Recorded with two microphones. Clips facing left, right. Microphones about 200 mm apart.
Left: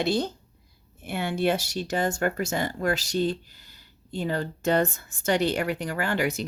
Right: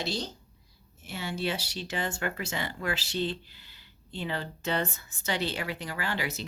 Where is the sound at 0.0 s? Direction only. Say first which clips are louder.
Left 9 dB; 55° left (ahead or behind).